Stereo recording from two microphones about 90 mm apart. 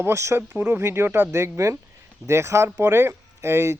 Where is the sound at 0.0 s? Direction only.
30° right (ahead or behind).